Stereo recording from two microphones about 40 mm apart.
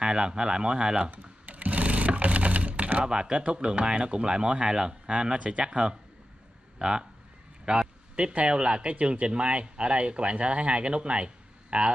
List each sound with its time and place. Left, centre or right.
0.0 s speech: centre
1.1 s sewing machine: right
5.1 s speech: right
8.2 s speech: right